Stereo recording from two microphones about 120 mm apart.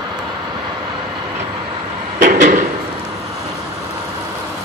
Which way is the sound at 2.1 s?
90° right.